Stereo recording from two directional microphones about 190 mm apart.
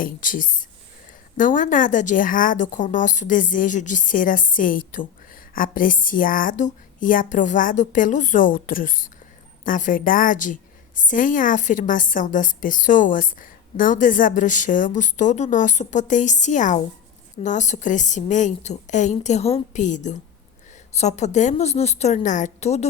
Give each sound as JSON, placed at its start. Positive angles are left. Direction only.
{"t": 0.0, "sound": "a woman's voice", "side_deg": 45}